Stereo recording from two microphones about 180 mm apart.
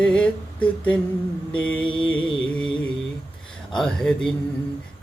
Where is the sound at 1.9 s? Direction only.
25° left (ahead or behind).